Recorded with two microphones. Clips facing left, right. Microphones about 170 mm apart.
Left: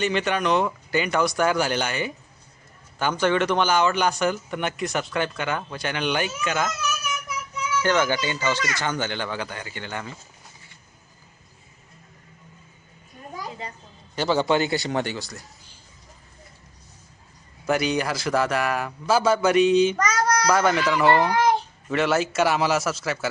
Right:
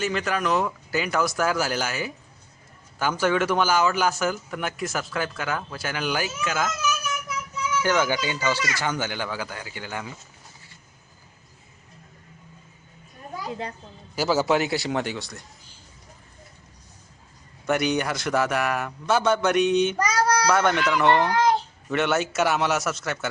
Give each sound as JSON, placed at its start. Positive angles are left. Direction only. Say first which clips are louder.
{"t": 0.0, "sound": "speech", "louder": "left 2 dB", "side_deg": 0}
{"t": 7.8, "sound": "speech", "louder": "left 1 dB", "side_deg": -10}
{"t": 14.2, "sound": "speech", "louder": "even", "side_deg": -5}
{"t": 17.7, "sound": "speech", "louder": "even", "side_deg": 0}
{"t": 20.0, "sound": "child singing", "louder": "even", "side_deg": -30}
{"t": 20.5, "sound": "speech", "louder": "left 1 dB", "side_deg": 5}
{"t": 21.8, "sound": "speech", "louder": "left 2 dB", "side_deg": 0}